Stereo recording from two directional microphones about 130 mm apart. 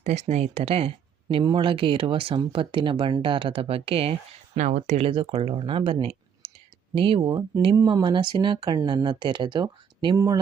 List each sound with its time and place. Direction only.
0.0 s speech: 60° right (ahead or behind)
4.5 s speech: 70° right (ahead or behind)
4.9 s speech: 45° right (ahead or behind)
7.2 s speech: 35° right (ahead or behind)